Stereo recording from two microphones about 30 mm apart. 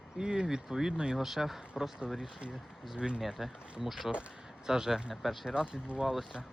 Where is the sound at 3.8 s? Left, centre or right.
Centre.